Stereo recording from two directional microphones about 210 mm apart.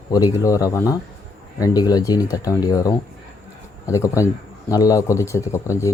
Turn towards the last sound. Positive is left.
turn(degrees=15)  # may be behind; listen again after turning